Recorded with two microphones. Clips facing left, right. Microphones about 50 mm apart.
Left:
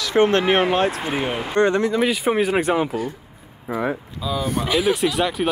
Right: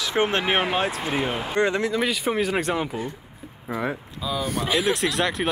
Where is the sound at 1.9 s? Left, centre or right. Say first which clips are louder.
Left 4 dB; centre.